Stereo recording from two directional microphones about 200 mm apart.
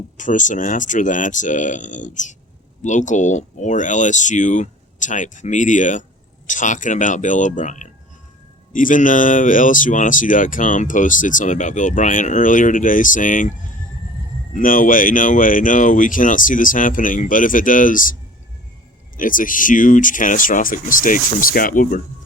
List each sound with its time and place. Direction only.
0.2 s speech: 40° left (ahead or behind)
14.5 s speech: 40° left (ahead or behind)